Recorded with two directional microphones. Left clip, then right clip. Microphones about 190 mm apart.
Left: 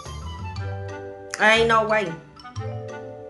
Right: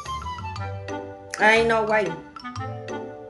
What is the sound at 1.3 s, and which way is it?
Speech, 10° left (ahead or behind).